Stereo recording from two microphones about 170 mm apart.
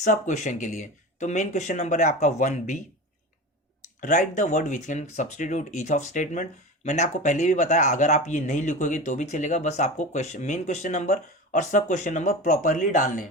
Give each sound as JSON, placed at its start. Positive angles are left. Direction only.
{"t": 0.0, "sound": "speech", "side_deg": 45}
{"t": 4.0, "sound": "speech", "side_deg": 50}